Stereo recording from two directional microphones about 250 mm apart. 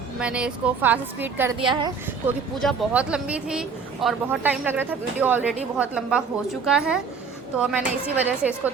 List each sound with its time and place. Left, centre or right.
0.2 s speech: centre
1.5 s a woman's voice: centre
2.6 s speech: centre